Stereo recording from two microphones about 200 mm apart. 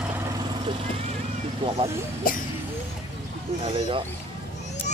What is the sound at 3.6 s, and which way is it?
Speech, 25° right (ahead or behind).